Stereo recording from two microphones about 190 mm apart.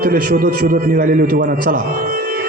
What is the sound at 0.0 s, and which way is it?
A man's voice, 50° right (ahead or behind).